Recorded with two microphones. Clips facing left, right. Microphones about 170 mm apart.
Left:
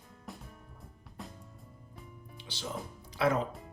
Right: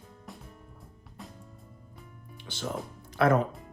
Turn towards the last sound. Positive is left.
turn(degrees=-55)  # may be behind; listen again after turning